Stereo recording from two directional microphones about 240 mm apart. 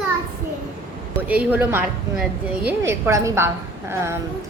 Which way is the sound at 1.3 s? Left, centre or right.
Centre.